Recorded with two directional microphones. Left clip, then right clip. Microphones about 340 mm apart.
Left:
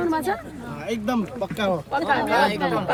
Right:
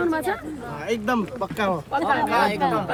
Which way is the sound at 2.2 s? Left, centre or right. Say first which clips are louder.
Even; centre.